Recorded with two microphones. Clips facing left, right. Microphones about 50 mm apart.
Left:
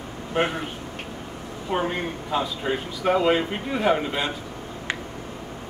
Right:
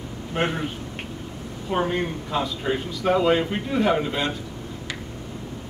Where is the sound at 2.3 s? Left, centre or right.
Centre.